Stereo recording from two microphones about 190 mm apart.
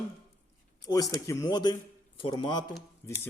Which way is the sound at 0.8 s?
20° left (ahead or behind).